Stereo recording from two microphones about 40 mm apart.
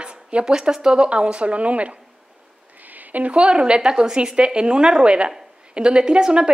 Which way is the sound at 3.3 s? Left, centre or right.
Right.